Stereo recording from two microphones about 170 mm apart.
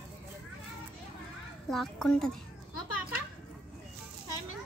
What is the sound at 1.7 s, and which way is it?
Speech, centre (ahead or behind).